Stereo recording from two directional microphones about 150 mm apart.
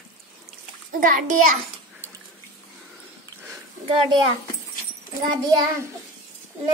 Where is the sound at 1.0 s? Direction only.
60° right (ahead or behind).